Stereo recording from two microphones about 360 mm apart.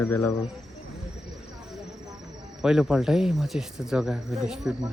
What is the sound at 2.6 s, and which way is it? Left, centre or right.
Speech, centre.